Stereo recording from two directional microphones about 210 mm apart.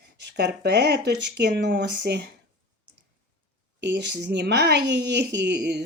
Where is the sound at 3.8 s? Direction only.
55° right (ahead or behind).